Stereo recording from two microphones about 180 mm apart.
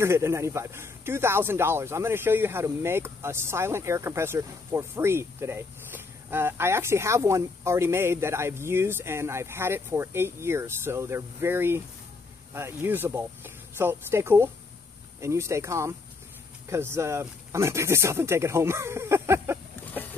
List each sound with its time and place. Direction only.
0.0 s speech: 15° right (ahead or behind)